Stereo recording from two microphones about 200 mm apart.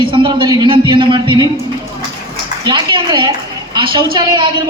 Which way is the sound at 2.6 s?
25° right (ahead or behind).